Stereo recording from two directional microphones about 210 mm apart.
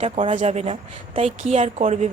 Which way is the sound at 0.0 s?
30° right (ahead or behind).